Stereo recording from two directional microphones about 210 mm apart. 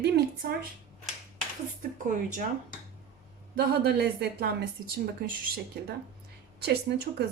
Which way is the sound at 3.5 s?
50° right (ahead or behind).